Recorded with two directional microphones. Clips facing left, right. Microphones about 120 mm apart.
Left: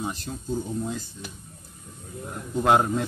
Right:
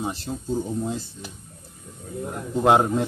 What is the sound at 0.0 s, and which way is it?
Speech, 30° right (ahead or behind).